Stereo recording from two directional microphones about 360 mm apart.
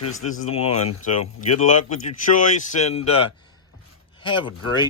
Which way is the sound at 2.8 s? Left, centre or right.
Centre.